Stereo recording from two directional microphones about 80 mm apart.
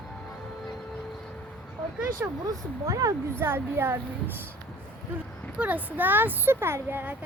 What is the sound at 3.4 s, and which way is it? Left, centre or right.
Speech, right.